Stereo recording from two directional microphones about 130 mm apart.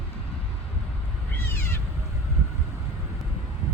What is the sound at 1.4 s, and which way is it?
Cat, 20° left (ahead or behind).